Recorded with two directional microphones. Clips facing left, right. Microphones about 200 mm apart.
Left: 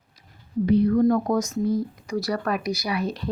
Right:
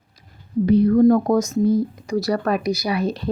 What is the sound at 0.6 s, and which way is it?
Speech, 40° right (ahead or behind).